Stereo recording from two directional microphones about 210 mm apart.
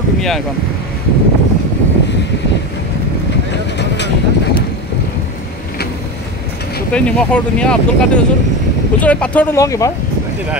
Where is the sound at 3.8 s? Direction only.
55° left (ahead or behind).